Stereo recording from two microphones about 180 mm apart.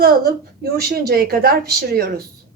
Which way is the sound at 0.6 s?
55° right (ahead or behind).